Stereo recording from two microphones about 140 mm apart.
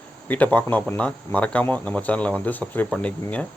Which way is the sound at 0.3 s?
10° left (ahead or behind).